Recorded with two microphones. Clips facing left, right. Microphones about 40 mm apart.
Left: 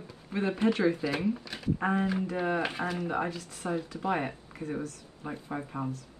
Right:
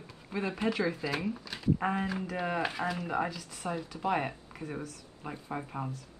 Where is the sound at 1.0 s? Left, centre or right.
Centre.